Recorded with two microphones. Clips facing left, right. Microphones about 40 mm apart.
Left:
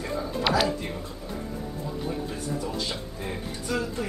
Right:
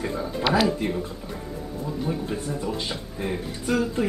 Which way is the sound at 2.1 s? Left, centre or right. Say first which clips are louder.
Right 2 dB; centre.